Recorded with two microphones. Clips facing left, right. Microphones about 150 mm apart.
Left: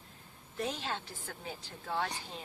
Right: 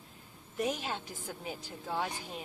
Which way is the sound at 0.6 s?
15° right (ahead or behind).